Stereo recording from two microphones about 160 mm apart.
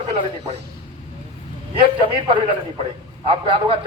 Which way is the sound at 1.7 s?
35° right (ahead or behind).